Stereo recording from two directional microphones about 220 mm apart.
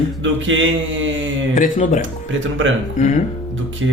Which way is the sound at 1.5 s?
35° left (ahead or behind).